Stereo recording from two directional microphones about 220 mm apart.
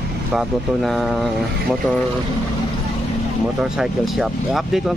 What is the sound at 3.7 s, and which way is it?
Speech, centre (ahead or behind).